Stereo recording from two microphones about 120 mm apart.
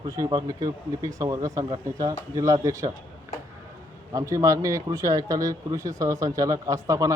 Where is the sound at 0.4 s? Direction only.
30° right (ahead or behind).